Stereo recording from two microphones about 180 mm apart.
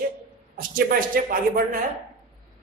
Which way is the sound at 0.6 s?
50° right (ahead or behind).